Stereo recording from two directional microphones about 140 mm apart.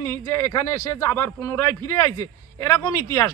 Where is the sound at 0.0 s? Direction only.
20° left (ahead or behind).